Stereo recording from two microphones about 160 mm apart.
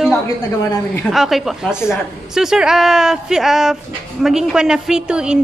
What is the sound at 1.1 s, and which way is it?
A woman's voice, centre (ahead or behind).